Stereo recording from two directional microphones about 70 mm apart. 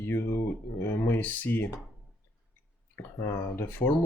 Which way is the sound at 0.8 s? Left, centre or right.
Left.